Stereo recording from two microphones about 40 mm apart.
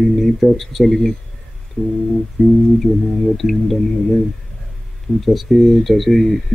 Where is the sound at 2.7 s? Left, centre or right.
Centre.